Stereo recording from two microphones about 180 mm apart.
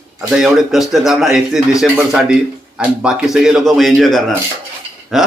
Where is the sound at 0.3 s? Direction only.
5° right (ahead or behind).